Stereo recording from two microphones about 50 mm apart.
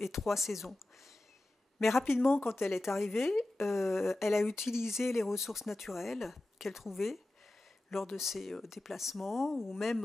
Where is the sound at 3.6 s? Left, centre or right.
Centre.